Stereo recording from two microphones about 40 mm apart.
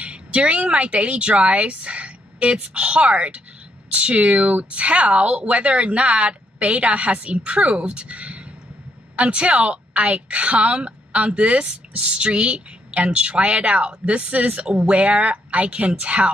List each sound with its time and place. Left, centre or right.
0.0 s a woman's voice: right